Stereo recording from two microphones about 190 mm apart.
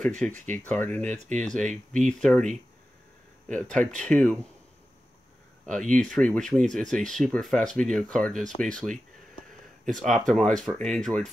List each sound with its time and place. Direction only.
0.5 s speech: 10° left (ahead or behind)
1.1 s speech: 35° right (ahead or behind)
1.4 s speech: 5° left (ahead or behind)
5.9 s speech: 5° left (ahead or behind)